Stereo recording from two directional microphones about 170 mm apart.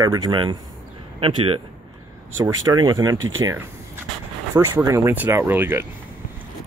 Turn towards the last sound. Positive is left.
turn(degrees=-15)  # may be behind; listen again after turning